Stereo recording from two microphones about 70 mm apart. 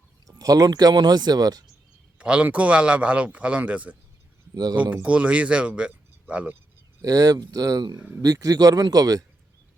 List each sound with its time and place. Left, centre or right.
0.3 s speech: right
2.1 s a man's voice: centre
4.5 s speech: right
5.0 s speech: centre
7.0 s speech: right